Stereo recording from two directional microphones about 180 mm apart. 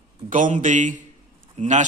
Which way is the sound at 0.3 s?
45° right (ahead or behind).